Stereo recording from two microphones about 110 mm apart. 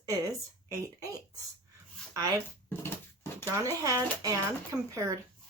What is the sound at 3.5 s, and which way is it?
Speech, 30° right (ahead or behind).